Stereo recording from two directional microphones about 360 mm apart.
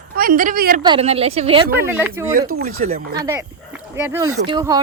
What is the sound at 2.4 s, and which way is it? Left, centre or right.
Speech, right.